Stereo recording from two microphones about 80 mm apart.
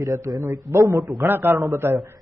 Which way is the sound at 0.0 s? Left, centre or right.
Right.